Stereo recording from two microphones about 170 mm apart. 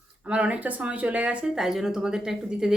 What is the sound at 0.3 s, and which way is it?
Speech, 10° right (ahead or behind).